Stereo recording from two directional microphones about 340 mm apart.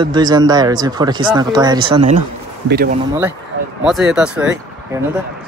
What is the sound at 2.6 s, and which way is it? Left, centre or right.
Speech, right.